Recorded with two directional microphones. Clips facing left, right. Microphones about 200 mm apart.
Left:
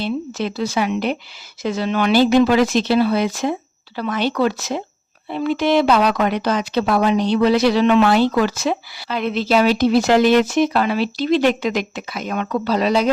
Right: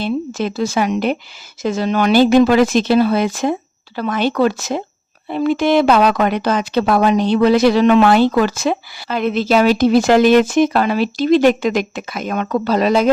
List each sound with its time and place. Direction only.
0.0 s speech: 45° right (ahead or behind)